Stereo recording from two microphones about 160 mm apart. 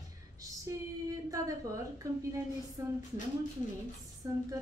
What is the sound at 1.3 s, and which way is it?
Speech, 20° right (ahead or behind).